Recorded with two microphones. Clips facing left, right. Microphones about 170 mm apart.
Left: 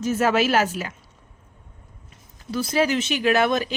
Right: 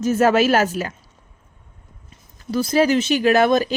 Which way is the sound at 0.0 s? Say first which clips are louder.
Right 4 dB; 45° right (ahead or behind).